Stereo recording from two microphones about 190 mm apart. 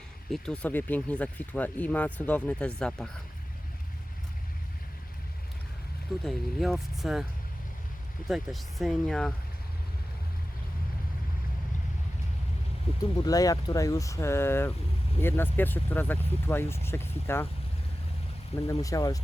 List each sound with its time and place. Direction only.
0.3 s speech: 5° left (ahead or behind)
6.2 s speech: centre (ahead or behind)
8.3 s speech: centre (ahead or behind)
12.9 s vehicle: 30° left (ahead or behind)
13.2 s speech: 20° left (ahead or behind)
18.7 s speech: 15° left (ahead or behind)